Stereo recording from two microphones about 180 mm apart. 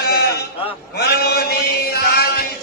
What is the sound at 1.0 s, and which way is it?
Chant, 65° left (ahead or behind).